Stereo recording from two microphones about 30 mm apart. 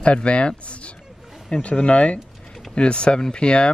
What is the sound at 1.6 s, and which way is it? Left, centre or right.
Speech, left.